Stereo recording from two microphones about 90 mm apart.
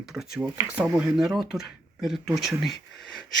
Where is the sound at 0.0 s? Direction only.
5° right (ahead or behind).